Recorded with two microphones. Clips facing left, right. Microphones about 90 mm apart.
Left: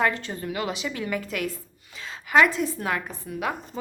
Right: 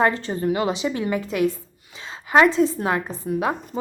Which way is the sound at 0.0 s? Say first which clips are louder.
Right 5 dB; 30° right (ahead or behind).